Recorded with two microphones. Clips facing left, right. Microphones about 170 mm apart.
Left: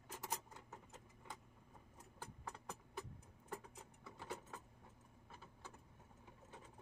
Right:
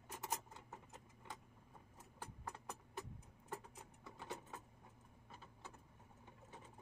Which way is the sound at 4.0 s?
Centre (ahead or behind).